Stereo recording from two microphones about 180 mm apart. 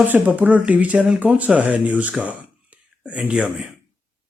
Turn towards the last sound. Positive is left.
turn(degrees=-5)  # may be behind; listen again after turning